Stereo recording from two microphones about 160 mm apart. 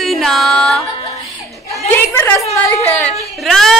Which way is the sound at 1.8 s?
15° left (ahead or behind).